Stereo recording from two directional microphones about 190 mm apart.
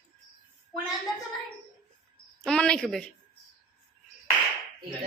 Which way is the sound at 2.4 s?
5° left (ahead or behind).